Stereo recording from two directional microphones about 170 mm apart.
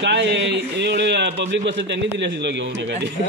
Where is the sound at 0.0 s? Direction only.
90° right.